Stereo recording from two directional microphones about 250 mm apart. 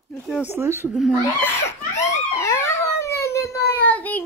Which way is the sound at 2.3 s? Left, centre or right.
Centre.